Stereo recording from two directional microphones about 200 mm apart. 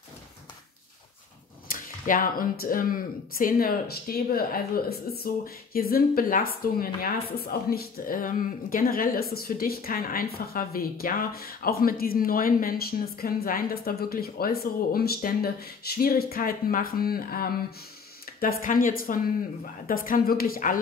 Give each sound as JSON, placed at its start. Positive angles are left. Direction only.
{"t": 1.7, "sound": "speech", "side_deg": 45}